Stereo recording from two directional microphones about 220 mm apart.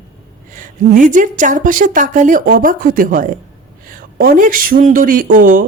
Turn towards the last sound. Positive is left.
turn(degrees=-40)  # may be behind; listen again after turning